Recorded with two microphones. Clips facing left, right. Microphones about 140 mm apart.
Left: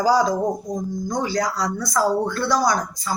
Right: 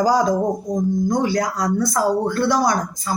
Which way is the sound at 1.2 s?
50° right (ahead or behind).